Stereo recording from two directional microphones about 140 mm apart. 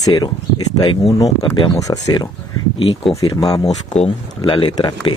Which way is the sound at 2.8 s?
45° left (ahead or behind).